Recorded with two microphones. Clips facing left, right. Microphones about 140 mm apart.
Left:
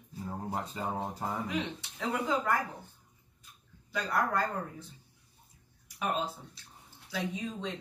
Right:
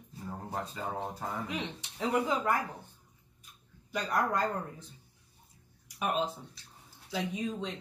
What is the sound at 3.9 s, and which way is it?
Speech, 15° right (ahead or behind).